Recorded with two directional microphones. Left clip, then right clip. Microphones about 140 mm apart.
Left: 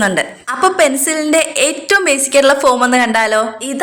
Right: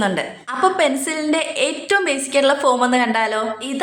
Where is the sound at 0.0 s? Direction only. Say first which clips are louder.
Left 6 dB; 20° left (ahead or behind).